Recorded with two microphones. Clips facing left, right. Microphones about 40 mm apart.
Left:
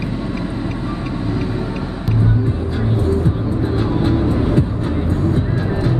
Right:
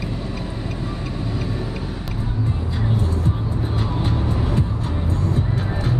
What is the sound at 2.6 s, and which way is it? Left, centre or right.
Music, centre.